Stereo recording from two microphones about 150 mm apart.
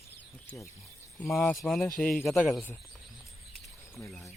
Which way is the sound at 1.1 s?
Centre (ahead or behind).